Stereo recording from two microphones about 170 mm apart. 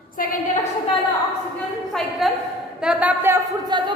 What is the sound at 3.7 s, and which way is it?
Speech, 25° right (ahead or behind).